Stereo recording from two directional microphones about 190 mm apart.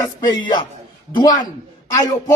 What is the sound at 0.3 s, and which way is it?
A man's voice, 25° left (ahead or behind).